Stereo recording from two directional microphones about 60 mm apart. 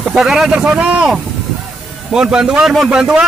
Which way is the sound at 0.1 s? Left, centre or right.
Centre.